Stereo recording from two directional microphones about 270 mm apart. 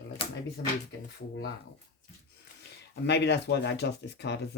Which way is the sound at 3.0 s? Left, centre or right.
Left.